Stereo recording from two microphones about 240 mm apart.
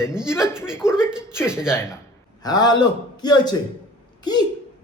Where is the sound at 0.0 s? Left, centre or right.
Centre.